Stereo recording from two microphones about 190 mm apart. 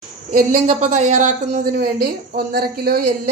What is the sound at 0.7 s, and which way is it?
A woman's voice, 40° right (ahead or behind).